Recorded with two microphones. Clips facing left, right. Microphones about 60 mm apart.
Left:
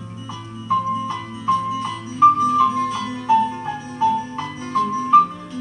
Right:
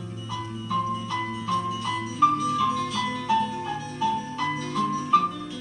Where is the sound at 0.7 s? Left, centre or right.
Left.